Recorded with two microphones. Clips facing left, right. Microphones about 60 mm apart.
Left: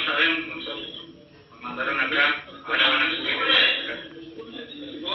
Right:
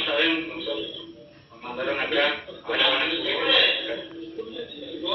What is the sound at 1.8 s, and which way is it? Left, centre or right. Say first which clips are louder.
Speech: left 1 dB; left.